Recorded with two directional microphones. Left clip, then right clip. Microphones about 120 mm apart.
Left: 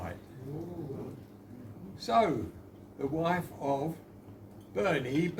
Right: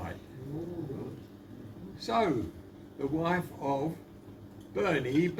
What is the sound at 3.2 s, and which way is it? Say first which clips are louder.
Speech: left 1 dB; 45° left (ahead or behind).